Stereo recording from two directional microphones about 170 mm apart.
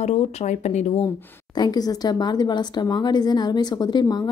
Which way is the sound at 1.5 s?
25° left (ahead or behind).